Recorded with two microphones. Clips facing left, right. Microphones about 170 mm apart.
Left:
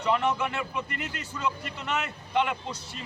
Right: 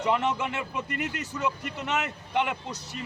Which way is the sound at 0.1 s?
20° right (ahead or behind).